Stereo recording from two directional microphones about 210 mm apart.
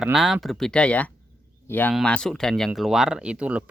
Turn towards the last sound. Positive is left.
turn(degrees=-5)  # may be behind; listen again after turning